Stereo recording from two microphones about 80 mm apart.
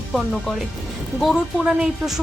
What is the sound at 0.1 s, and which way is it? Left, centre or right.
Speech, centre.